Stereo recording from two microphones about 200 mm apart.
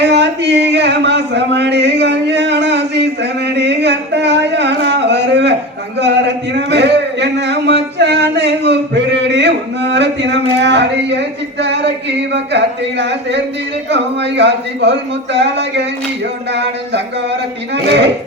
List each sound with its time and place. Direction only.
0.0 s a sound: 60° right (ahead or behind)
13.9 s a man's voice: 60° right (ahead or behind)
17.8 s a man's voice: 60° right (ahead or behind)